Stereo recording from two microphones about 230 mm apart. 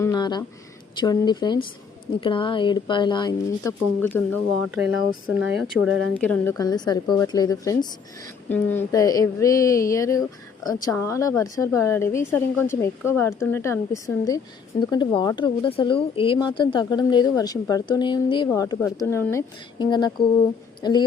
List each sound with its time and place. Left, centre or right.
0.0 s a sound: centre
0.9 s speech: centre
5.3 s speech: centre
6.1 s speech: centre